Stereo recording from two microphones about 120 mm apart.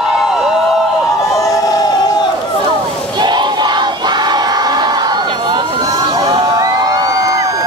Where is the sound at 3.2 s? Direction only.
35° right (ahead or behind).